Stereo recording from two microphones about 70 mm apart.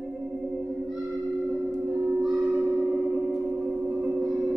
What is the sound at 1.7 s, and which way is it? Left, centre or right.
Gong, centre.